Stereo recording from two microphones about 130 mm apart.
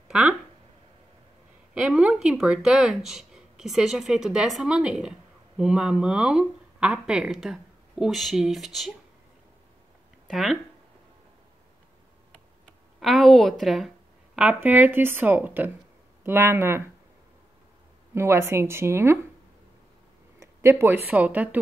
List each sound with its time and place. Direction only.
0.1 s speech: 5° right (ahead or behind)
1.7 s speech: 10° right (ahead or behind)
10.3 s speech: centre (ahead or behind)
13.0 s a woman's voice: centre (ahead or behind); by 16.8 s 20° right (ahead or behind)
18.1 s a woman's voice: 20° right (ahead or behind)
20.8 s a woman's voice: 15° right (ahead or behind)